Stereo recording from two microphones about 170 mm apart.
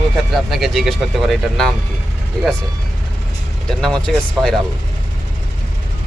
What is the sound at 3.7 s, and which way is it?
Speech, 5° left (ahead or behind).